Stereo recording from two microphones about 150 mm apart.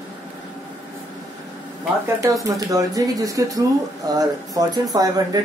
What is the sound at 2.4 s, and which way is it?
Speech, 25° right (ahead or behind).